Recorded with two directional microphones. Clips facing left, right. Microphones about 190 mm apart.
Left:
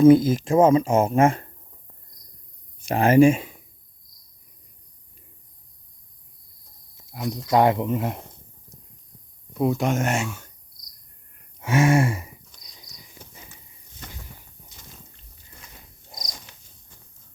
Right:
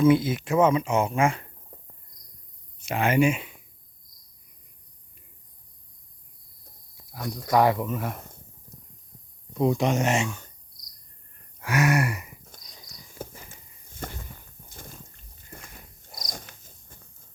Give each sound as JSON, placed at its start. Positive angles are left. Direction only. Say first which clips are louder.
{"t": 0.0, "sound": "speech", "louder": "left 6 dB", "side_deg": 45}
{"t": 0.4, "sound": "speech", "louder": "left 3 dB", "side_deg": 30}
{"t": 0.9, "sound": "speech", "louder": "left 5 dB", "side_deg": 50}
{"t": 1.7, "sound": "cricket", "louder": "right 7 dB", "side_deg": -55}
{"t": 2.9, "sound": "speech", "louder": "left 7 dB", "side_deg": 35}
{"t": 7.1, "sound": "speech", "louder": "left 2 dB", "side_deg": 20}
{"t": 9.6, "sound": "speech", "louder": "left 1 dB", "side_deg": 0}
{"t": 11.6, "sound": "gasp", "louder": "left 4 dB", "side_deg": 25}
{"t": 14.7, "sound": "a sound", "louder": "right 5 dB", "side_deg": -50}
{"t": 16.5, "sound": "cricket", "louder": "right 1 dB", "side_deg": -55}